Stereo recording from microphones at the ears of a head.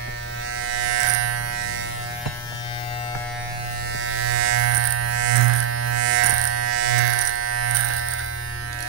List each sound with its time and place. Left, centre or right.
0.7 s electric shaver: right
4.1 s electric shaver: right